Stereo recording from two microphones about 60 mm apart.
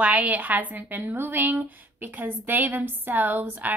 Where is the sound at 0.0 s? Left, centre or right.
Right.